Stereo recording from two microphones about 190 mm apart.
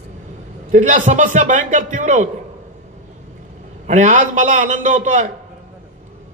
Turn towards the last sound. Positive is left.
turn(degrees=-40)  # may be behind; listen again after turning